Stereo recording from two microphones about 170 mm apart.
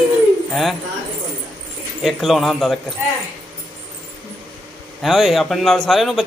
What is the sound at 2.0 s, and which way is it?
Speech, centre (ahead or behind).